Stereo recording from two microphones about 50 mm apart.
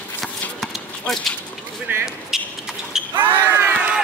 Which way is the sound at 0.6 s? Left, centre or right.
Centre.